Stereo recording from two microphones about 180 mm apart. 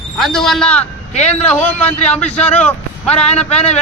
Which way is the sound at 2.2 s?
35° left (ahead or behind).